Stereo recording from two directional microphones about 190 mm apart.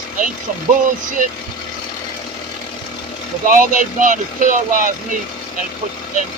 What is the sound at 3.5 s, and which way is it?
Speech, 45° right (ahead or behind).